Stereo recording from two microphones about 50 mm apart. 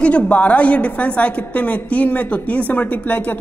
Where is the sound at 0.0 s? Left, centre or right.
Left.